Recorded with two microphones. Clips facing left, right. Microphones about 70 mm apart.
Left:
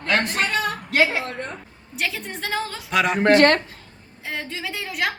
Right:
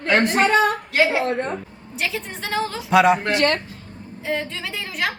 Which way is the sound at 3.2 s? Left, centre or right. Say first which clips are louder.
Left 5 dB; left.